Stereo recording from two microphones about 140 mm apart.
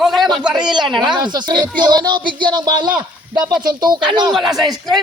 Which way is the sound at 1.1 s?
30° right (ahead or behind).